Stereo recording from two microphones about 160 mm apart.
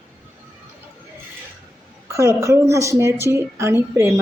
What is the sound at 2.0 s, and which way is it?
A woman's voice, 20° right (ahead or behind).